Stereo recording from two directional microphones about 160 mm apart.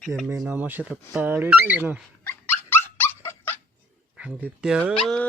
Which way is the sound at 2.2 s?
15° left (ahead or behind).